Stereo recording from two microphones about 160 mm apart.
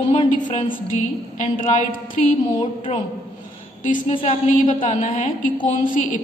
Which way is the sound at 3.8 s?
50° left (ahead or behind).